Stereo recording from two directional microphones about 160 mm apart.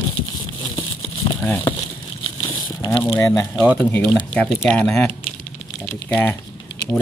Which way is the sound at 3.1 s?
20° left (ahead or behind).